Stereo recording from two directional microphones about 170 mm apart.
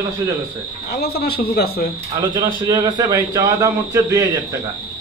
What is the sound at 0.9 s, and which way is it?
Speech, 65° left (ahead or behind).